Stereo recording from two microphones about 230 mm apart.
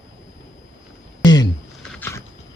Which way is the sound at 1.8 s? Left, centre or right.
Centre.